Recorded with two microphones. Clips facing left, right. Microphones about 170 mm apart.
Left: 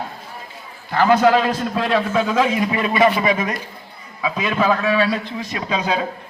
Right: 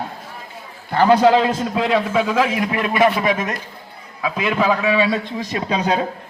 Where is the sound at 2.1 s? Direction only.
5° right (ahead or behind); by 6.1 s 40° right (ahead or behind).